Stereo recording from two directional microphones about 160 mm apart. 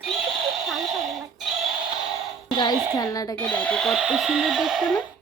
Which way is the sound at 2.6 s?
25° left (ahead or behind).